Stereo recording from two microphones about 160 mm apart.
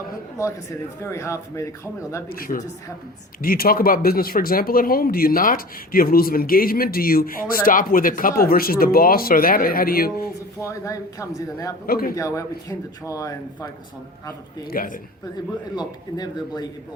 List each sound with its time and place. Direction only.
1.0 s speech: 15° left (ahead or behind)
2.3 s speech: 60° left (ahead or behind)
10.6 s speech: 20° left (ahead or behind)
11.9 s a man's voice: 65° left (ahead or behind)
12.1 s speech: 20° left (ahead or behind)
14.7 s speech: 65° left (ahead or behind)
15.7 s speech: 25° left (ahead or behind)